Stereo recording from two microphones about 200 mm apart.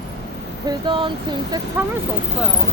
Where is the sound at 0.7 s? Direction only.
25° right (ahead or behind).